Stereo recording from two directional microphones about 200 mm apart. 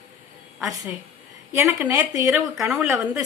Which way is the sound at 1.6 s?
10° right (ahead or behind).